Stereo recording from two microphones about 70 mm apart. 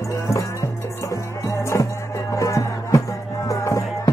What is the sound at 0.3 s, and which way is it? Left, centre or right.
Music, left.